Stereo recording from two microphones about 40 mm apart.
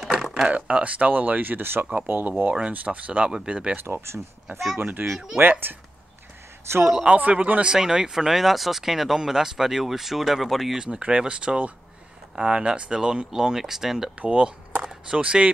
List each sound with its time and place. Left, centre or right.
0.0 s a sound: centre
0.5 s speech: right
2.0 s speech: right
3.8 s speech: right
4.7 s speech: right
5.0 s speech: centre
5.4 s speech: right
7.2 s speech: right
7.6 s speech: centre
10.8 s speech: right; by 14.1 s centre
14.2 s speech: right